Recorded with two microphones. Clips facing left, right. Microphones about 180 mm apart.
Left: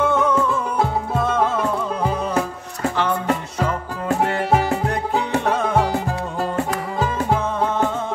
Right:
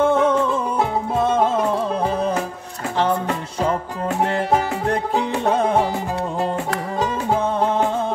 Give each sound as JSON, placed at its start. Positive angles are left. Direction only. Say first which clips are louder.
{"t": 0.0, "sound": "music", "louder": "right 2 dB", "side_deg": -30}
{"t": 5.4, "sound": "music", "louder": "right 2 dB", "side_deg": -30}